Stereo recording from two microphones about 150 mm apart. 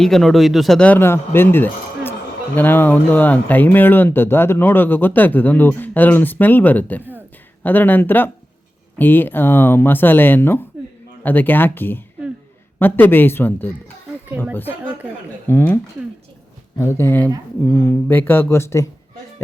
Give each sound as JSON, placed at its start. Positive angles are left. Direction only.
{"t": 0.0, "sound": "speech", "side_deg": 0}
{"t": 15.4, "sound": "speech", "side_deg": 15}